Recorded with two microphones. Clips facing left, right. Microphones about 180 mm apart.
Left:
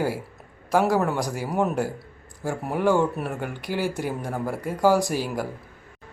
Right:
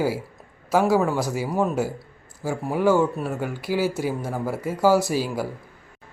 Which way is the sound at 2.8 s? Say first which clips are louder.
Right 2 dB; 15° left (ahead or behind).